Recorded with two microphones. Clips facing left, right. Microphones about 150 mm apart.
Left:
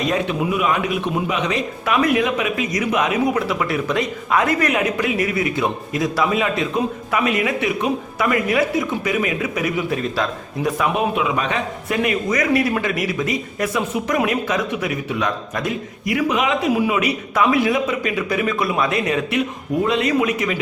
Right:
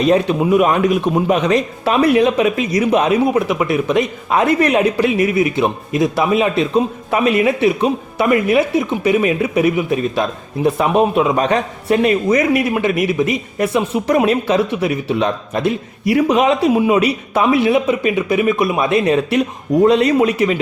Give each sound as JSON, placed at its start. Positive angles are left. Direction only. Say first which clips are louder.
{"t": 0.1, "sound": "speech", "louder": "right 7 dB", "side_deg": -40}
{"t": 1.8, "sound": "speech", "louder": "right 4 dB", "side_deg": -30}
{"t": 3.4, "sound": "speech", "louder": "right 5 dB", "side_deg": -20}